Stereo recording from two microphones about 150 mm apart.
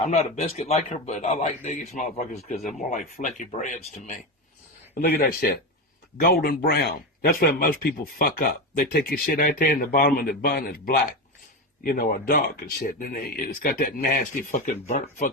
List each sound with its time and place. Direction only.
0.0 s a man's voice: 50° left (ahead or behind)
4.9 s speech: 90° left
11.8 s speech: 65° left (ahead or behind)